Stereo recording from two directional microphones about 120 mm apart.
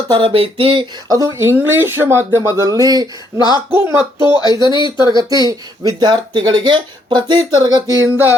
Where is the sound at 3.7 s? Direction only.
20° right (ahead or behind).